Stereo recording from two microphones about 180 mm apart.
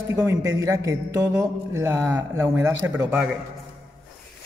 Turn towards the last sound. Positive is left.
turn(degrees=-15)  # may be behind; listen again after turning